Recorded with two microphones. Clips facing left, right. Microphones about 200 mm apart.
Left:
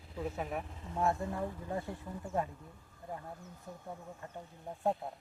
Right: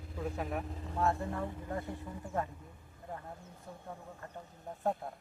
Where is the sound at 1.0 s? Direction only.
20° left (ahead or behind).